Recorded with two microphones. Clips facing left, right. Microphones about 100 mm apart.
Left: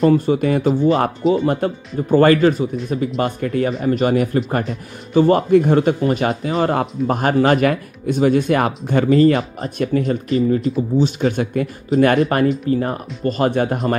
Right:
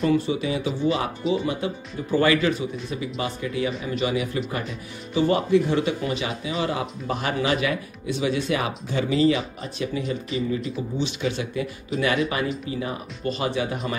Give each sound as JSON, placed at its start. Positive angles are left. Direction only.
{"t": 0.0, "sound": "speech", "side_deg": 45}